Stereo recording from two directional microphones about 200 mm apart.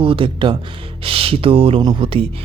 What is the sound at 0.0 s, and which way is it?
Speech, 25° right (ahead or behind).